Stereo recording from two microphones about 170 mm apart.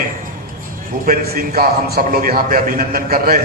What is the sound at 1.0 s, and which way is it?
A man's voice, 65° right (ahead or behind).